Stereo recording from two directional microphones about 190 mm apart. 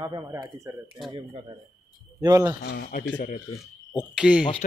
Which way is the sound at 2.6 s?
55° left (ahead or behind).